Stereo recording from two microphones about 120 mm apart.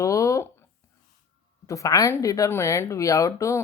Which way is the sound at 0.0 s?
25° left (ahead or behind).